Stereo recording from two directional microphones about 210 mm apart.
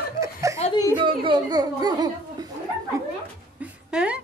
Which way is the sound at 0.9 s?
20° right (ahead or behind).